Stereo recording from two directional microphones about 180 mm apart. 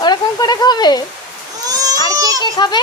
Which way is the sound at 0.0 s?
20° left (ahead or behind).